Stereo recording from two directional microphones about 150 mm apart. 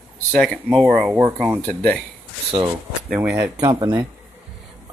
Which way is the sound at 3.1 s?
5° right (ahead or behind).